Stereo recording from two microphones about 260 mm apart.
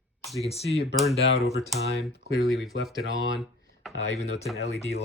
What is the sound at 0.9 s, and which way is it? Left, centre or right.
Speech, centre.